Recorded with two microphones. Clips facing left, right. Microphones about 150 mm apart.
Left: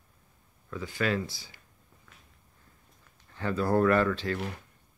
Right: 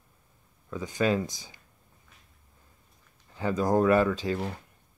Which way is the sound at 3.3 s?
15° right (ahead or behind).